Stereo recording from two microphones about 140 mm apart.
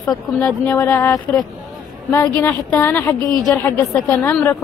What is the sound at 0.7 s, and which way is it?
A woman's voice, 20° left (ahead or behind).